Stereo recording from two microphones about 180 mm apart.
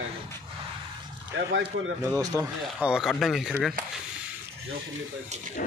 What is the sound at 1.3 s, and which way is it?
Speech, 90° right.